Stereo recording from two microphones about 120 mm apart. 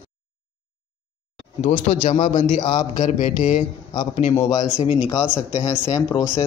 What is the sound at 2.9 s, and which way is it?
Speech, 90° left.